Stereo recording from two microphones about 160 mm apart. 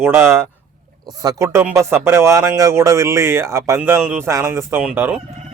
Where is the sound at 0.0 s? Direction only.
15° right (ahead or behind).